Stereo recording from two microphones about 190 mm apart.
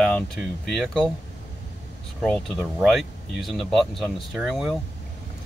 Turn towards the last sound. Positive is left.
turn(degrees=0)  # may be behind; listen again after turning